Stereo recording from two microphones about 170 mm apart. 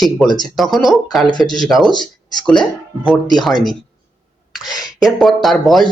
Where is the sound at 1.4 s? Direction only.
25° left (ahead or behind).